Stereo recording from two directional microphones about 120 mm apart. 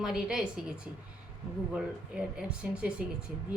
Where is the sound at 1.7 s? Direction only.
10° right (ahead or behind).